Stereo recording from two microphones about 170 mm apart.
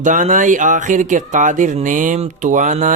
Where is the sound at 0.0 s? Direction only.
50° right (ahead or behind).